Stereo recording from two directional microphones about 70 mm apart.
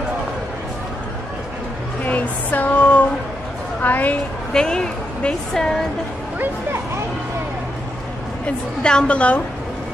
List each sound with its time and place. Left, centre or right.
2.0 s a sound: left
3.8 s a woman's voice: left
4.6 s a woman's voice: centre
8.5 s a woman's voice: centre